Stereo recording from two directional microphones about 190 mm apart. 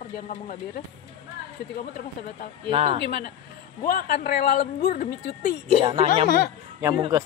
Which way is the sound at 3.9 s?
50° left (ahead or behind).